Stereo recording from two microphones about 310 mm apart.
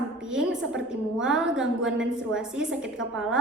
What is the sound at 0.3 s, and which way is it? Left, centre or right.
A woman's voice, centre.